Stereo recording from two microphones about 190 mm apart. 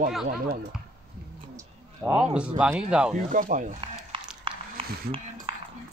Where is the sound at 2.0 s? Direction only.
10° right (ahead or behind).